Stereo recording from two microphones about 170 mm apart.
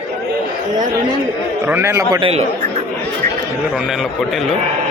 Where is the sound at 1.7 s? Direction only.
15° right (ahead or behind).